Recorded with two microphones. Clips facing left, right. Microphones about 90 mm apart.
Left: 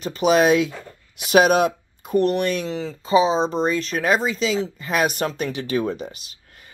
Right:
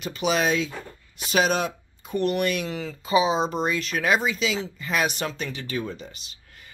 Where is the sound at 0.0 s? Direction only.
40° left (ahead or behind).